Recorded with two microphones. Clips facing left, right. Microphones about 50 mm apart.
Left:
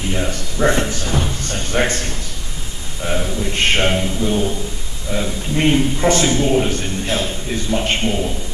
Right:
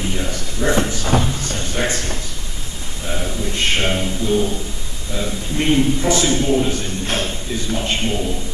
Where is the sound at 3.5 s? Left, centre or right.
Left.